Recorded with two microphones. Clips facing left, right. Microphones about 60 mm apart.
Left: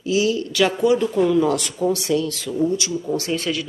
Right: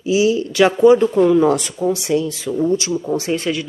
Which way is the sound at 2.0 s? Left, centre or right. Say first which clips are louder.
Right 3 dB; centre.